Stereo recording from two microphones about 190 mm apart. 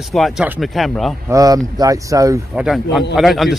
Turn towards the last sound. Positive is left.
turn(degrees=0)  # may be behind; listen again after turning